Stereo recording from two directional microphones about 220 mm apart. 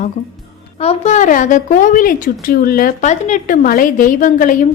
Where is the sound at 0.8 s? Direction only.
30° left (ahead or behind).